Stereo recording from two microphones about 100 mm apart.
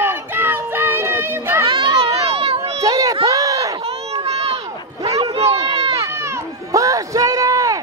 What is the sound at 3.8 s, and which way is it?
Run, 85° right.